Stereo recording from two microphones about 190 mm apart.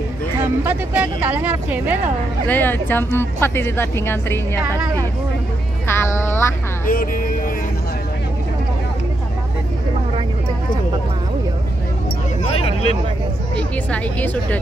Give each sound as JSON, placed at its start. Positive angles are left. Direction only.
{"t": 0.7, "sound": "speech", "side_deg": -10}
{"t": 2.4, "sound": "speech", "side_deg": 10}
{"t": 5.9, "sound": "music", "side_deg": 15}
{"t": 6.9, "sound": "speech", "side_deg": 45}
{"t": 13.6, "sound": "speech", "side_deg": 5}